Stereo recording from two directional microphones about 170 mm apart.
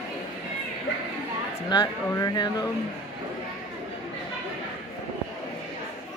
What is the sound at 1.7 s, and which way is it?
Speech, 25° left (ahead or behind).